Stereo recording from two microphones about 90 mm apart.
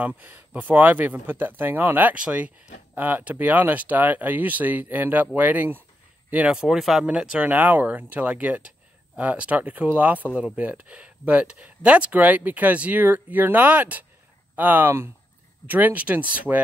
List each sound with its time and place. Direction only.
0.0 s speech: 20° right (ahead or behind)